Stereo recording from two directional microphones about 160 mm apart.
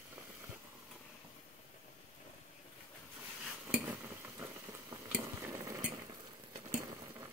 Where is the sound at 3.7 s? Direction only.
10° right (ahead or behind).